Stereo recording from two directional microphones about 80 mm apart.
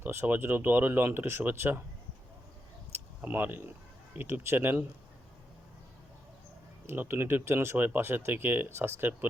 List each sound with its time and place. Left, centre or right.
0.0 s speech: right
2.9 s a sound: right
4.1 s speech: right
6.8 s speech: right